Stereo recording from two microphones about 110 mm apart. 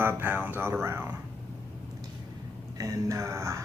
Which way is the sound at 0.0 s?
20° right (ahead or behind).